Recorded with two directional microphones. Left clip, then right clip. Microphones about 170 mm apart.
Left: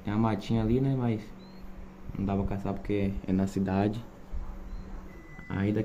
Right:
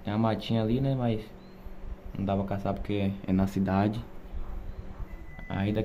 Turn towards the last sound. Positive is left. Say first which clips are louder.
# left 1 dB
turn(degrees=-20)  # may be behind; listen again after turning